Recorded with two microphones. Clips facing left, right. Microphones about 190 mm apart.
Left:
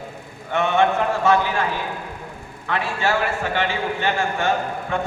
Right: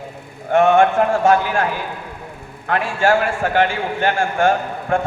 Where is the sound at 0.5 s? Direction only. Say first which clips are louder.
Right 6 dB; 50° right (ahead or behind).